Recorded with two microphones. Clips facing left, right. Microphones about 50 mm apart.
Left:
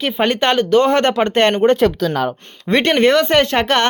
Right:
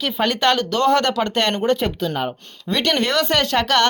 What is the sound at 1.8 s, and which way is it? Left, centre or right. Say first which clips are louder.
Speech: left 7 dB; left.